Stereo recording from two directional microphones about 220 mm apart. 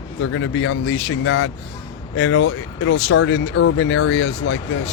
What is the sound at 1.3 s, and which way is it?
Speech, 65° left (ahead or behind).